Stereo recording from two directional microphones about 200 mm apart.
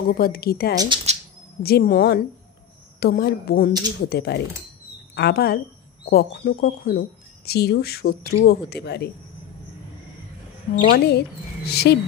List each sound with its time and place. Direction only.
0.1 s speech: 50° left (ahead or behind)
0.8 s speech: 25° right (ahead or behind)
1.6 s speech: 50° left (ahead or behind)
10.9 s speech: 55° left (ahead or behind)